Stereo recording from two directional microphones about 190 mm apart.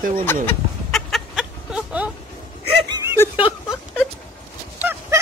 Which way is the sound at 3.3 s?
25° left (ahead or behind).